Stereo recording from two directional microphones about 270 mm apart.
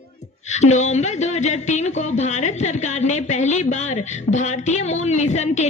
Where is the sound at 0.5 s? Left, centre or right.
Left.